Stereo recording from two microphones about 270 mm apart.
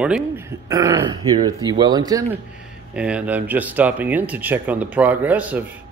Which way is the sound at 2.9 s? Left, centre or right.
Centre.